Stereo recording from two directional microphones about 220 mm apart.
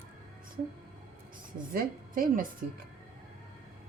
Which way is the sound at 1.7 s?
40° right (ahead or behind).